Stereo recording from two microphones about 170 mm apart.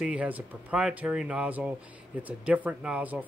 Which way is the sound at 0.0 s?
5° right (ahead or behind).